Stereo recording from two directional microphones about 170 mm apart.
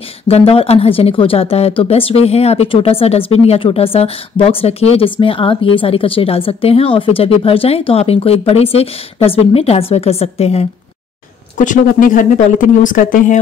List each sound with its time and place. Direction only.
0.3 s a woman's voice: 35° left (ahead or behind)
11.5 s speech: 50° left (ahead or behind)